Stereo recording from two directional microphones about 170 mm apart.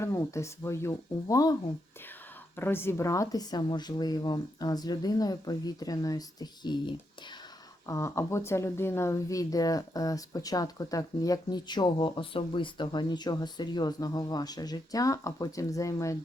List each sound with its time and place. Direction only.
0.0 s speech: 15° left (ahead or behind)
2.6 s speech: 15° left (ahead or behind)